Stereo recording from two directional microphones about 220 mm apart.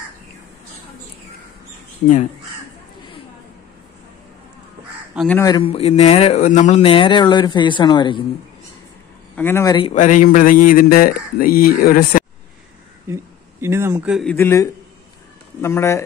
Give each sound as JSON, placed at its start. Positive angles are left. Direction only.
{"t": 5.1, "sound": "speech", "side_deg": 0}
{"t": 5.6, "sound": "speech", "side_deg": 25}
{"t": 9.3, "sound": "speech", "side_deg": 10}
{"t": 9.8, "sound": "speech", "side_deg": 30}
{"t": 13.1, "sound": "speech", "side_deg": -10}
{"t": 14.3, "sound": "a man's voice", "side_deg": 10}